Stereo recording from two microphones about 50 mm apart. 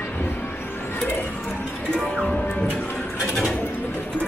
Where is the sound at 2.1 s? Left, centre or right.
Left.